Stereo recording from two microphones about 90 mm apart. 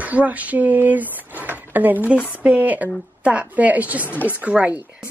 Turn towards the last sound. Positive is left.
turn(degrees=-15)  # may be behind; listen again after turning